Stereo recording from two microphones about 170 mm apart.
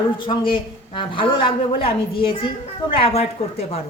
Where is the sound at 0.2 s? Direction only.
25° left (ahead or behind).